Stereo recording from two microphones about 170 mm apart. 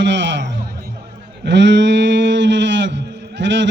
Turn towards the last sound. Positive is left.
turn(degrees=-90)